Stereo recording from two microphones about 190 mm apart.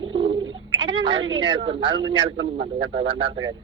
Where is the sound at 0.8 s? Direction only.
25° right (ahead or behind).